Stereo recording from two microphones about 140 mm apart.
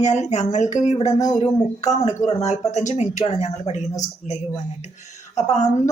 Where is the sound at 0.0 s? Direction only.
55° left (ahead or behind).